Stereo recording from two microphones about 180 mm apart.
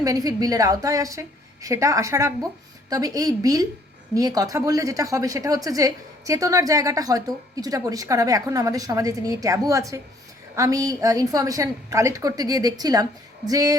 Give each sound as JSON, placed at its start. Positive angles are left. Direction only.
{"t": 0.0, "sound": "a woman's voice", "side_deg": -20}